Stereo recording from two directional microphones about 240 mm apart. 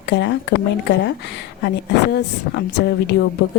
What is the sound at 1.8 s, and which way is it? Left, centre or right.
A woman's voice, left.